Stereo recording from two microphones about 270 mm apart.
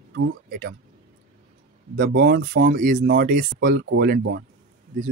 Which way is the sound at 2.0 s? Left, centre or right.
Right.